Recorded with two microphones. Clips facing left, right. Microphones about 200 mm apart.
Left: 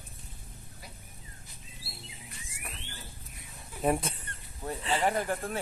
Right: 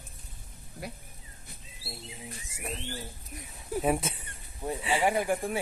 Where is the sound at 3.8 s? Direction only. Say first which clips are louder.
Left 1 dB; centre (ahead or behind).